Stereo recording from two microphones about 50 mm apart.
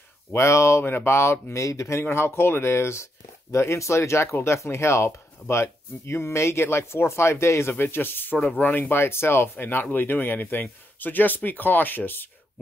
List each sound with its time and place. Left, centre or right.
0.3 s speech: left
0.8 s speech: left
3.5 s speech: left
7.7 s speech: left
9.0 s speech: left